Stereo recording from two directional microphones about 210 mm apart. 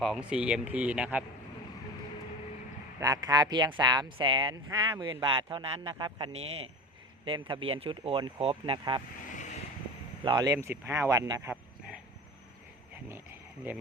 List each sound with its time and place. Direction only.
0.0 s speech: 5° right (ahead or behind)
3.0 s speech: 15° right (ahead or behind)
9.3 s vehicle: 35° left (ahead or behind)
10.2 s speech: 20° right (ahead or behind)